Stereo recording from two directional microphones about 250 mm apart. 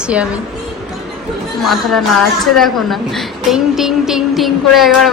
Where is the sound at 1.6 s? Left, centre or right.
Centre.